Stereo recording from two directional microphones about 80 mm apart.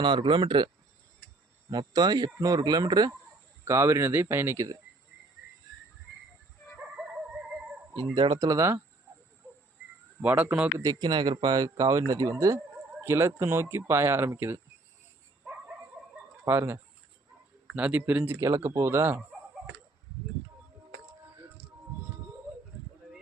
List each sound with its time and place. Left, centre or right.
0.0 s speech: right
1.9 s speech: right
3.7 s speech: right
6.9 s dog: centre
8.1 s speech: right
8.4 s speech: right
10.2 s speech: right
11.0 s speech: right
13.0 s speech: right
16.4 s speech: right
17.7 s speech: centre
18.3 s speech: right